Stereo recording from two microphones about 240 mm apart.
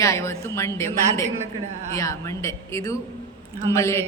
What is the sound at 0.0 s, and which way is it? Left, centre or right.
A woman's voice, centre.